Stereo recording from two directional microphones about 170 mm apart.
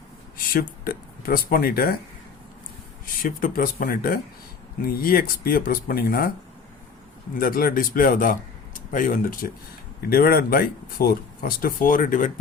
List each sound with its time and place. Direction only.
0.3 s speech: 60° left (ahead or behind)
3.2 s speech: 55° left (ahead or behind)
7.3 s speech: 55° left (ahead or behind)